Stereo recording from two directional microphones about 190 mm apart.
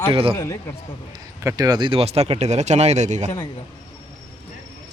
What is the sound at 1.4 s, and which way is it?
Speech, 20° right (ahead or behind).